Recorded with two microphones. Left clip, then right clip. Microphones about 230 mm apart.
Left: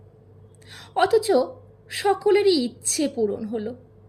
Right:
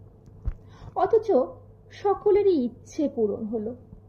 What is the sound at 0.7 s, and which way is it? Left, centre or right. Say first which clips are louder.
A woman's voice: left 2 dB; left.